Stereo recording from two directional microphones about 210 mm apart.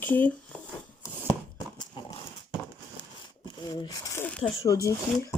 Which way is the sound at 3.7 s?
15° left (ahead or behind).